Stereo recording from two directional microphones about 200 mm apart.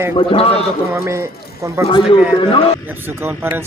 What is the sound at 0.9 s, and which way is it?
Speech, 15° right (ahead or behind).